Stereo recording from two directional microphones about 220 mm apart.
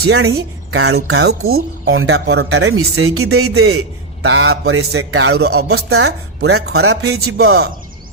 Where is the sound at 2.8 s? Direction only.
75° right (ahead or behind).